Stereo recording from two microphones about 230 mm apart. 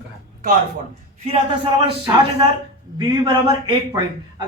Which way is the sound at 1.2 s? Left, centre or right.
Right.